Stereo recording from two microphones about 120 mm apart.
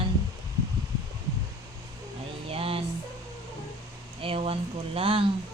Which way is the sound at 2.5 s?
50° right (ahead or behind).